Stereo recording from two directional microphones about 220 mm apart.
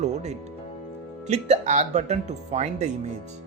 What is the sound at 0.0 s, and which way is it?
Music, 30° right (ahead or behind).